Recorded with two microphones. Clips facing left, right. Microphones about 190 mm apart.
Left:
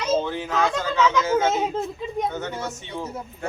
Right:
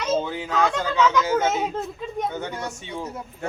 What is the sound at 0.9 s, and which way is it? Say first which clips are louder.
Speech: right 1 dB; 5° left (ahead or behind).